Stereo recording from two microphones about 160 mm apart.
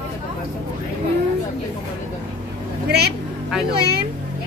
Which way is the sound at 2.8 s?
90° right.